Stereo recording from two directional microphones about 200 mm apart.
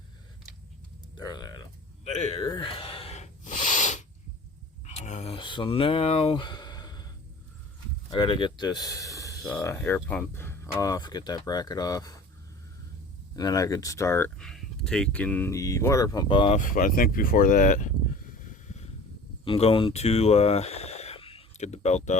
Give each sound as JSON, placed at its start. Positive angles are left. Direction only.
{"t": 1.1, "sound": "a sound", "side_deg": 20}
{"t": 2.0, "sound": "speech", "side_deg": 30}
{"t": 2.5, "sound": "gasp", "side_deg": 25}
{"t": 4.9, "sound": "a sound", "side_deg": 35}
{"t": 8.1, "sound": "speech", "side_deg": 20}
{"t": 9.4, "sound": "speech", "side_deg": 5}
{"t": 13.3, "sound": "speech", "side_deg": 20}
{"t": 16.6, "sound": "speech", "side_deg": 45}
{"t": 19.5, "sound": "speech", "side_deg": 30}